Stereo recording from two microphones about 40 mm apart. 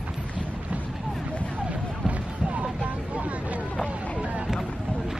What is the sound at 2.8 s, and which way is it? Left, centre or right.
Vehicle, right.